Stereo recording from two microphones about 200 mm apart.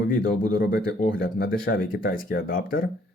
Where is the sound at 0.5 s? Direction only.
50° left (ahead or behind).